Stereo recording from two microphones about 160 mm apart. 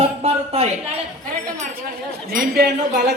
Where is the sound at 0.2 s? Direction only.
35° right (ahead or behind).